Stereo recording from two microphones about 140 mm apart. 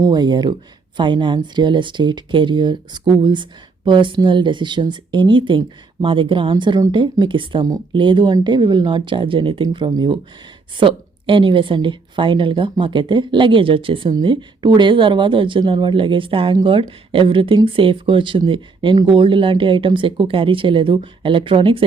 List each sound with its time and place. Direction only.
0.0 s speech: 30° right (ahead or behind)